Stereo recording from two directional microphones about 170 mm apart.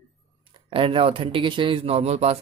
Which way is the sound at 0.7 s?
30° right (ahead or behind).